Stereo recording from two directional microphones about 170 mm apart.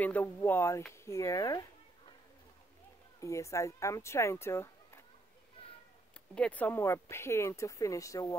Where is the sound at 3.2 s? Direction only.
15° left (ahead or behind).